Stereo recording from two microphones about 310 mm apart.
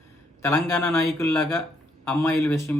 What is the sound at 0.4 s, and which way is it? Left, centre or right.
Speech, centre.